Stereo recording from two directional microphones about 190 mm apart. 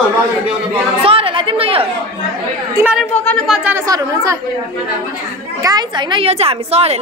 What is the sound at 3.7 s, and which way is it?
Speech, 20° right (ahead or behind).